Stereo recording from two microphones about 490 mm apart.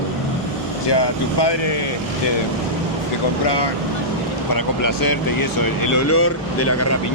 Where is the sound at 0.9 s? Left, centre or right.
Left.